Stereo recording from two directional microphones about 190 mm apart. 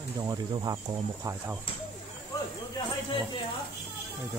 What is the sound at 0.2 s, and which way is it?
Speech, 25° right (ahead or behind).